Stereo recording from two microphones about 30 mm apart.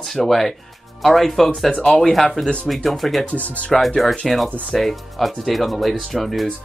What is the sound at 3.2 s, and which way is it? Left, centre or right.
Speech, left.